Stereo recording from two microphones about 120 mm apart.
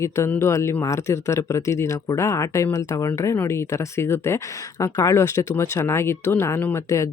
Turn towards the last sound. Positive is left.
turn(degrees=25)  # may be behind; listen again after turning